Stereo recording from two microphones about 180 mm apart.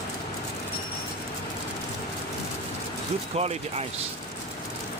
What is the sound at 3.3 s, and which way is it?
Speech, 35° right (ahead or behind).